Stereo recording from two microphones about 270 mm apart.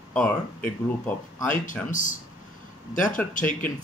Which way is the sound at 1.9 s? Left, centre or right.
Left.